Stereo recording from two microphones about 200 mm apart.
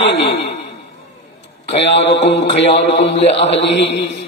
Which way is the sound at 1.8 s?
60° left (ahead or behind).